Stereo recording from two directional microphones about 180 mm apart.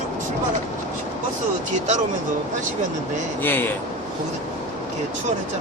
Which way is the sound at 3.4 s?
10° left (ahead or behind).